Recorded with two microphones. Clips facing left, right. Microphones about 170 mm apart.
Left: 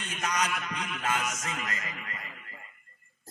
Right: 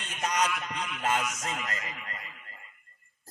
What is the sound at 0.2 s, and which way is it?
A man's voice, 30° right (ahead or behind).